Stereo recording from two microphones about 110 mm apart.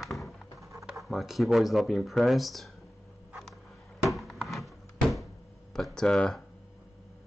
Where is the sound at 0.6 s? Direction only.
30° right (ahead or behind).